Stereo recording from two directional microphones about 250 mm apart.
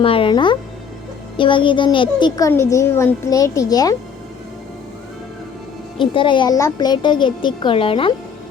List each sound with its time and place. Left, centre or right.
0.0 s speech: left
6.0 s speech: centre